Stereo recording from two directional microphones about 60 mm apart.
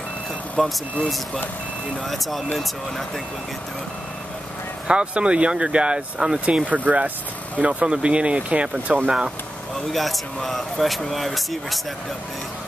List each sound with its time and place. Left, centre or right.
0.6 s speech: centre
4.8 s speech: centre
9.9 s speech: centre